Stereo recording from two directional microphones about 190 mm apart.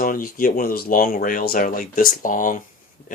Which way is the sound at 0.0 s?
45° left (ahead or behind).